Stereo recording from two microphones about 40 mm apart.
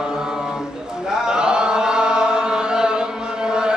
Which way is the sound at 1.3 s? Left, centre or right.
Right.